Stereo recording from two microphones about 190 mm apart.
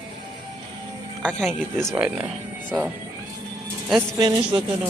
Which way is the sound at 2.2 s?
10° right (ahead or behind).